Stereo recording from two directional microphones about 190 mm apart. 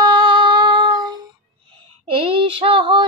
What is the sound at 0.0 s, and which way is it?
Humming, 25° right (ahead or behind).